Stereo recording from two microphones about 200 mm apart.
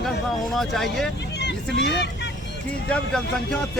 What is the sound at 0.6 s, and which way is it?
Speech, centre (ahead or behind).